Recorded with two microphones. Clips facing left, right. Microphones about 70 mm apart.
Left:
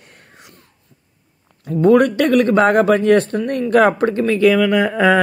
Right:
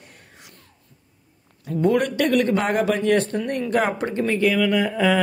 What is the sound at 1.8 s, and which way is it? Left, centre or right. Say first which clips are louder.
Speech: left 7 dB; left.